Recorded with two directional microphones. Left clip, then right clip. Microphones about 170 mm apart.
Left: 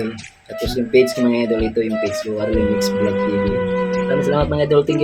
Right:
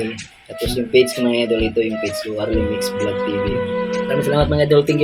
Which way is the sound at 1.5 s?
Centre (ahead or behind).